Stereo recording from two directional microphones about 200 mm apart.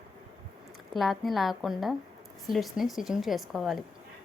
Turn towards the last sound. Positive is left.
turn(degrees=0)  # may be behind; listen again after turning